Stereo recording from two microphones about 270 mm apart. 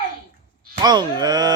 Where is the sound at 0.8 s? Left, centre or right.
Centre.